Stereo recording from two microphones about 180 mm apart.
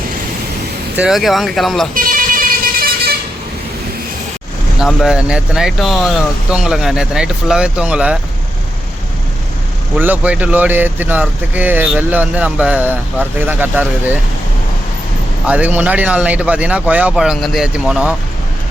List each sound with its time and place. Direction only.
0.9 s speech: 5° right (ahead or behind)
2.0 s vehicle: 50° right (ahead or behind)
4.8 s speech: centre (ahead or behind)
10.0 s speech: 10° right (ahead or behind)
15.4 s speech: 10° right (ahead or behind)